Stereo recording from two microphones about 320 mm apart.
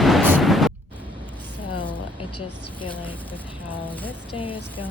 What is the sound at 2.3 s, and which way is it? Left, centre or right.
Speech, left.